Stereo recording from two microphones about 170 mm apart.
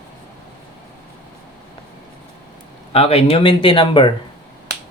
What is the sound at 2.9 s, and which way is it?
Speech, 35° left (ahead or behind).